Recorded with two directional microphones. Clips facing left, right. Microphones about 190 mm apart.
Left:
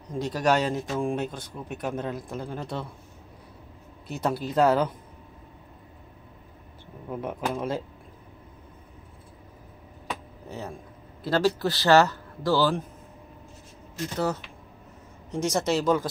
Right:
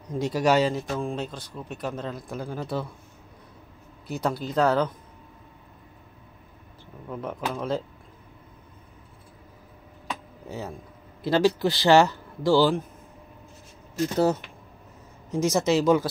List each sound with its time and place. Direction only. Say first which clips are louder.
0.2 s speech: right 2 dB; 10° right (ahead or behind)
4.1 s speech: even; centre (ahead or behind)
7.1 s speech: left 1 dB; 10° left (ahead or behind)
11.2 s a man's voice: right 2 dB; 15° right (ahead or behind)
14.1 s speech: right 5 dB; 25° right (ahead or behind)
15.3 s a man's voice: right 3 dB; 5° right (ahead or behind)